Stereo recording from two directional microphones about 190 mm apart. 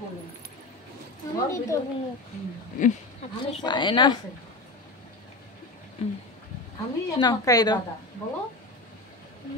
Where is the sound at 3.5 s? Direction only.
25° left (ahead or behind).